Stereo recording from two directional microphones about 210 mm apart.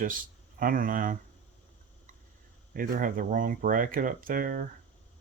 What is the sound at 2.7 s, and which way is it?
Speech, 40° right (ahead or behind).